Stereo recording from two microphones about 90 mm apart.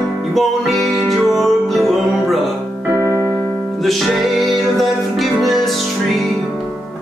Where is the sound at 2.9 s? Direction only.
35° right (ahead or behind).